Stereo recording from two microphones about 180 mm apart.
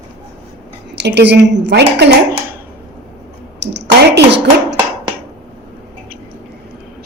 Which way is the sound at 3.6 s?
75° right (ahead or behind).